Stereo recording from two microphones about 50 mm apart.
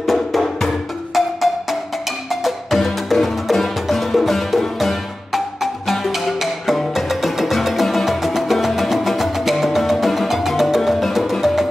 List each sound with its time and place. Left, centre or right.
0.0 s music: centre